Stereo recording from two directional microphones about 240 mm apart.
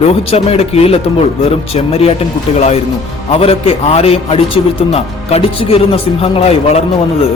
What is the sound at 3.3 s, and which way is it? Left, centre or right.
A man's voice, left.